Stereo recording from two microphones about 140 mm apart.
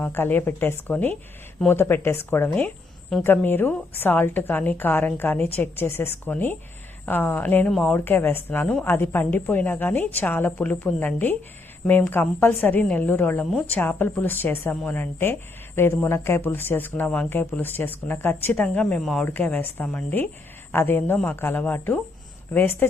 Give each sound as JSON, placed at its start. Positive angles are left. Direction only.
{"t": 0.0, "sound": "a woman's voice", "side_deg": 15}